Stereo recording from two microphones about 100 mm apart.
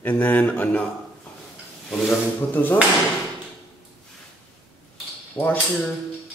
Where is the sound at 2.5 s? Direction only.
20° left (ahead or behind).